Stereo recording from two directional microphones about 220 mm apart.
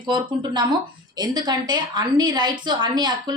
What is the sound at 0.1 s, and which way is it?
A woman's voice, 20° right (ahead or behind).